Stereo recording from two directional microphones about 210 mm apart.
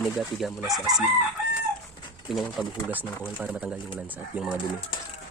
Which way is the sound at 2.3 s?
Centre (ahead or behind).